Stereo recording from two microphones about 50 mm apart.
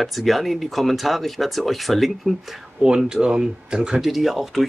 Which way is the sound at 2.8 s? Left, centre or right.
Centre.